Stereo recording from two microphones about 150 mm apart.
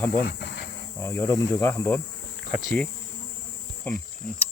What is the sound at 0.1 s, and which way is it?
Insect, 90° left.